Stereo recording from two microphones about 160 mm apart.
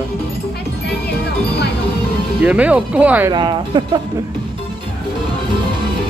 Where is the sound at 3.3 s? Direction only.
30° right (ahead or behind).